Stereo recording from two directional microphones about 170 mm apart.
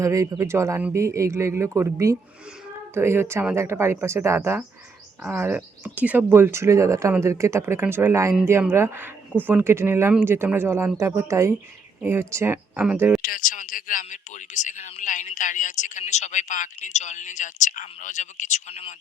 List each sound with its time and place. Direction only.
0.0 s speech: 20° right (ahead or behind)
13.2 s speech: 55° left (ahead or behind); by 18.9 s 40° left (ahead or behind)